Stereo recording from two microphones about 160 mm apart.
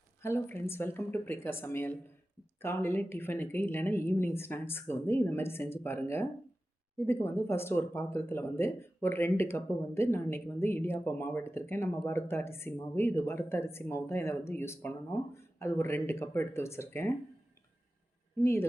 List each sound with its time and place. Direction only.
0.2 s speech: 15° left (ahead or behind)